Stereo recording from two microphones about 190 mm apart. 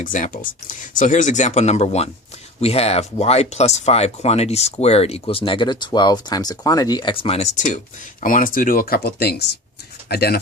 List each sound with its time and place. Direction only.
0.0 s speech: 45° left (ahead or behind)